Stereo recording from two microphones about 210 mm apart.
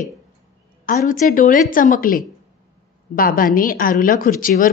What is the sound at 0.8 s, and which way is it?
A woman's voice, 40° left (ahead or behind).